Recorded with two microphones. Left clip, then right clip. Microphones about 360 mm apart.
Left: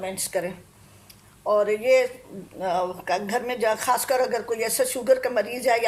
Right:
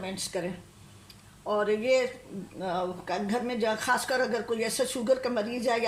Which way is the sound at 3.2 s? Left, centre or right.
Centre.